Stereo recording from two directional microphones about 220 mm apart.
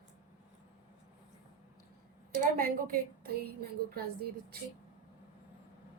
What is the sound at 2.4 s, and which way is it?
A woman's voice, 40° right (ahead or behind).